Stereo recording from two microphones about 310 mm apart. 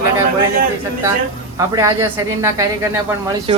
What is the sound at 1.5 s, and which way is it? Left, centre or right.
A woman's voice, centre.